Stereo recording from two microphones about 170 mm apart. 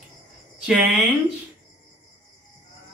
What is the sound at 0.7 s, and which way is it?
Speech, 5° right (ahead or behind).